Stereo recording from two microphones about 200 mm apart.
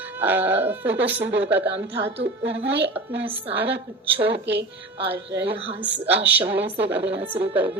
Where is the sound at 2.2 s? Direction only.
65° right (ahead or behind).